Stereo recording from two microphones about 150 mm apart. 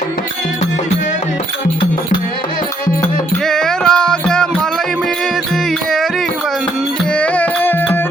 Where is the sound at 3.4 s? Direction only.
5° left (ahead or behind).